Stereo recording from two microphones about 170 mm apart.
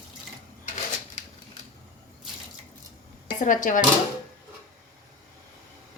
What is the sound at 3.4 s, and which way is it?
Speech, 50° left (ahead or behind).